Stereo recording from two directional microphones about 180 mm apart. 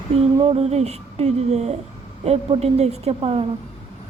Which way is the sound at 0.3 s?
35° right (ahead or behind).